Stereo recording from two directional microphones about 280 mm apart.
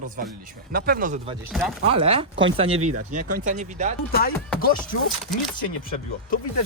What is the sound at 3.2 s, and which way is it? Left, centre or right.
Speech, right.